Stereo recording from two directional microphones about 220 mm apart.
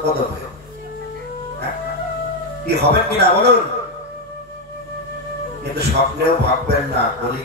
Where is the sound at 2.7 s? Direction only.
50° right (ahead or behind).